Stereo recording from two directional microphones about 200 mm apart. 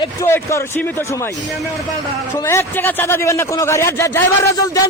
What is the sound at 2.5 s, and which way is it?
A man's voice, 10° left (ahead or behind).